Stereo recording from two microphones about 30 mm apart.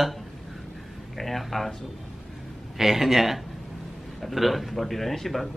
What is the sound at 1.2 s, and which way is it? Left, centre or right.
Speech, centre.